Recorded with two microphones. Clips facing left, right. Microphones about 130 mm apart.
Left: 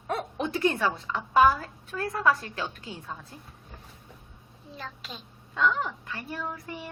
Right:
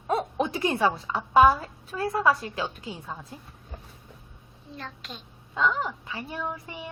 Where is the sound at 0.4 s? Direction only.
15° right (ahead or behind).